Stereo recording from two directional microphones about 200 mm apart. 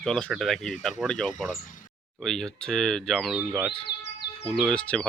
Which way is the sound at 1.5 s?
40° left (ahead or behind).